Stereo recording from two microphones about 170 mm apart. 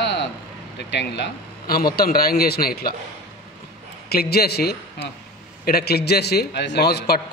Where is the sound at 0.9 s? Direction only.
80° left; by 3.0 s 65° left (ahead or behind).